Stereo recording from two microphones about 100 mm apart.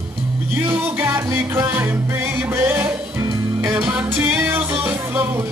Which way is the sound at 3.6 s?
25° right (ahead or behind).